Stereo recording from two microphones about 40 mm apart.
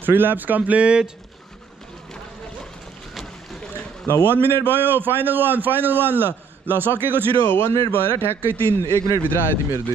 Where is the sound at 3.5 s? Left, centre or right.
Centre.